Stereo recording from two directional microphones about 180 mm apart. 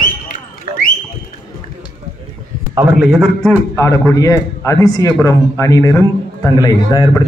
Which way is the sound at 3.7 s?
15° left (ahead or behind).